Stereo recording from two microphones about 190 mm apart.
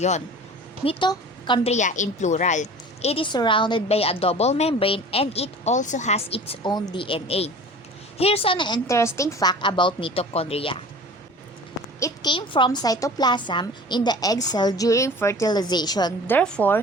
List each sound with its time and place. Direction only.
0.9 s a woman's voice: 25° left (ahead or behind)
1.7 s a woman's voice: 40° left (ahead or behind)
11.9 s a woman's voice: 20° left (ahead or behind)
16.3 s a woman's voice: 5° left (ahead or behind)